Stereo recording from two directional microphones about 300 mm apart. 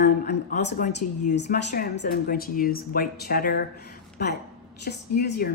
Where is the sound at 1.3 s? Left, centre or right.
Left.